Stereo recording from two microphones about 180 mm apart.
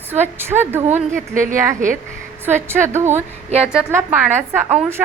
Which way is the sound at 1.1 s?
45° right (ahead or behind).